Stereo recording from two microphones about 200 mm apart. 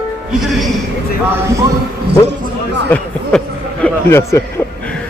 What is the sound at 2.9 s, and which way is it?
Speech, 10° left (ahead or behind).